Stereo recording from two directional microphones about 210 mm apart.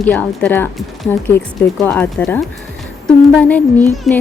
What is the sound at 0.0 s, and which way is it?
Speech, 5° left (ahead or behind).